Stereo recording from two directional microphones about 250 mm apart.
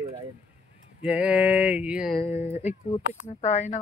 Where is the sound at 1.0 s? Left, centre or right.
Centre.